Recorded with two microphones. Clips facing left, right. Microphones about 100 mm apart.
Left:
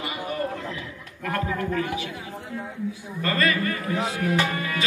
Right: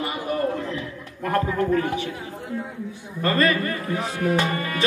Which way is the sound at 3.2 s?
35° right (ahead or behind).